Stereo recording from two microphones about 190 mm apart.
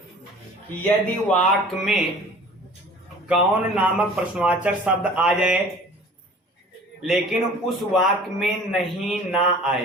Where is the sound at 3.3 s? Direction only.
5° right (ahead or behind).